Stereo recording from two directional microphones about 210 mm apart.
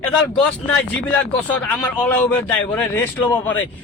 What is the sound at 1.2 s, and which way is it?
Speech, 5° left (ahead or behind).